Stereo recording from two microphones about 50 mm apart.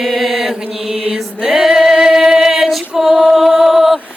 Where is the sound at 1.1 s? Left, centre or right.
Centre.